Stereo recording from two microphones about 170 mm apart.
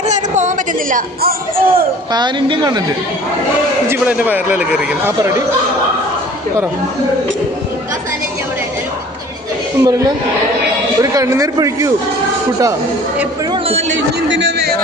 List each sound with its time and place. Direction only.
0.1 s speech: 45° right (ahead or behind)
2.1 s speech: 30° right (ahead or behind)
3.8 s speech: 10° right (ahead or behind)
9.8 s speech: 20° right (ahead or behind)
13.5 s a man's voice: 35° right (ahead or behind)
13.9 s speech: 90° right